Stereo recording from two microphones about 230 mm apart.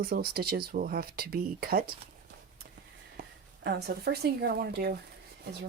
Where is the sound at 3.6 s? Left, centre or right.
Right.